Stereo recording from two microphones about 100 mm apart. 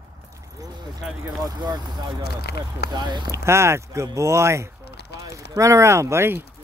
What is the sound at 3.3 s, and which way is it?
Speech, 25° right (ahead or behind).